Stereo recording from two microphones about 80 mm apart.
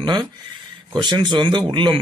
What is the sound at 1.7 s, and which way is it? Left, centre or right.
Speech, right.